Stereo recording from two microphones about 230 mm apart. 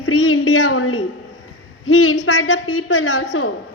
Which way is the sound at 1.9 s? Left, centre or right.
Left.